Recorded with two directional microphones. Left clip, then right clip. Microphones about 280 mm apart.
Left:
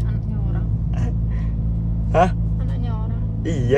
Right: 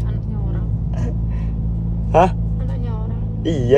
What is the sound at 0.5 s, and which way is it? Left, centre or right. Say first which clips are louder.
Vehicle: right 1 dB; centre.